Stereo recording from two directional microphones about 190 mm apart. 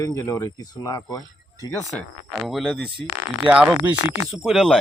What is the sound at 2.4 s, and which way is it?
Speech, centre (ahead or behind).